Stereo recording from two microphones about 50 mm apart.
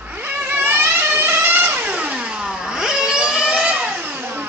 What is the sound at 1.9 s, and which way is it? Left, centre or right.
Vehicle, right.